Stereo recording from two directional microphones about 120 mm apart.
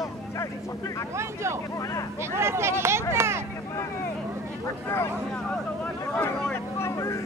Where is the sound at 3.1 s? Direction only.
20° right (ahead or behind).